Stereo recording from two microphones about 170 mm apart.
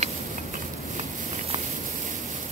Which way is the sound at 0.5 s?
40° right (ahead or behind).